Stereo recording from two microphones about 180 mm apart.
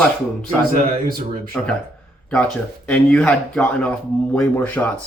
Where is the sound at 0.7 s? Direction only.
50° right (ahead or behind).